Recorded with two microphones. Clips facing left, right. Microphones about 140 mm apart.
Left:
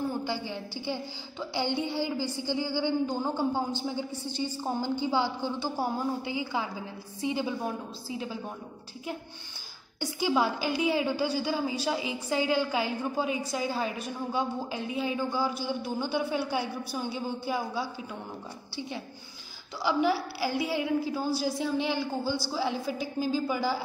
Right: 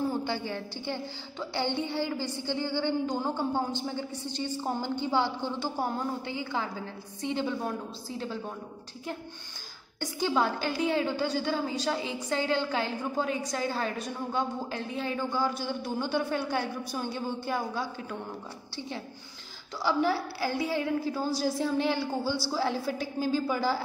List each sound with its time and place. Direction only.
0.5 s a woman's voice: 10° left (ahead or behind)
2.1 s a woman's voice: 65° right (ahead or behind)
2.4 s a woman's voice: 10° left (ahead or behind)
9.9 s a woman's voice: 10° left (ahead or behind)
19.8 s a man's voice: centre (ahead or behind)